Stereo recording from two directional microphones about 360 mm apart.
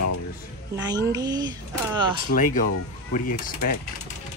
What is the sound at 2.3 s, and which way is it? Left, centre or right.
Speech, left.